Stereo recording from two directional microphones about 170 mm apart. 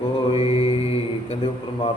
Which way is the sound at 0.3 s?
35° left (ahead or behind).